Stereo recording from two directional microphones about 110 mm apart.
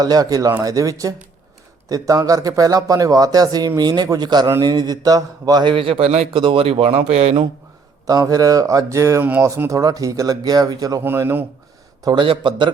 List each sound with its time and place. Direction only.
0.0 s speech: 35° right (ahead or behind); by 6.2 s 75° right (ahead or behind)
6.3 s speech: 50° right (ahead or behind)
8.0 s speech: 35° right (ahead or behind)
9.2 s speech: 15° right (ahead or behind)
9.5 s speech: 30° right (ahead or behind)
11.0 s speech: 20° right (ahead or behind)
12.0 s a man's voice: 50° right (ahead or behind)